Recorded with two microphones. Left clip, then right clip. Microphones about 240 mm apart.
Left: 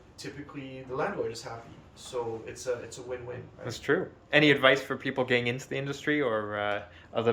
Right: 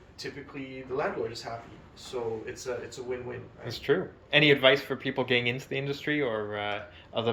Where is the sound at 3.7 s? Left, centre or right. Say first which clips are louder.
Right 1 dB; centre.